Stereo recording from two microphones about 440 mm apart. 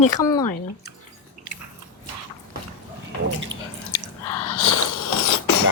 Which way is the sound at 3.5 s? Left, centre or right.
Right.